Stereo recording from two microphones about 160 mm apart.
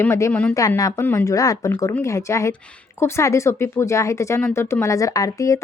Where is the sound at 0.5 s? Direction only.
20° left (ahead or behind).